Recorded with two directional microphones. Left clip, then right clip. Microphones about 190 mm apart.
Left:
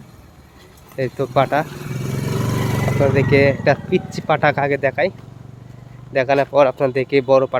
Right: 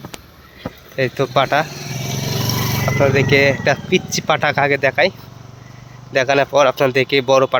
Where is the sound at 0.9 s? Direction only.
Centre (ahead or behind).